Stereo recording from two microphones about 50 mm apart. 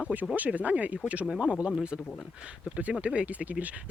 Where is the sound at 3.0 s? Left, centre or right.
Right.